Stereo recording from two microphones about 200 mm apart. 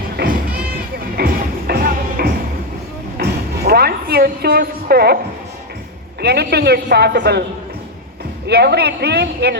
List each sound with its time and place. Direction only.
0.2 s music: 50° right (ahead or behind)
6.2 s a woman's voice: 55° right (ahead or behind)
8.4 s a woman's voice: 55° right (ahead or behind)